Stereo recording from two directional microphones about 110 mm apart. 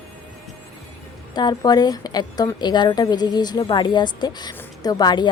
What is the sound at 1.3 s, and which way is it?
A woman's voice, 40° left (ahead or behind).